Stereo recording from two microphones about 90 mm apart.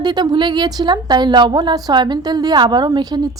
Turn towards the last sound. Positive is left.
turn(degrees=-50)  # may be behind; listen again after turning